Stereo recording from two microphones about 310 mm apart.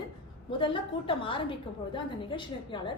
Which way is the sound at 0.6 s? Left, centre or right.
Centre.